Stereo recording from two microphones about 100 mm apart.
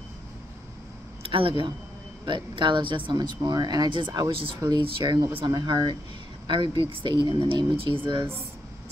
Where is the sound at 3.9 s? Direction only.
55° right (ahead or behind).